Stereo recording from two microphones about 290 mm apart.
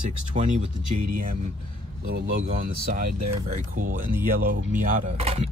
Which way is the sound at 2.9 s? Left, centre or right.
Right.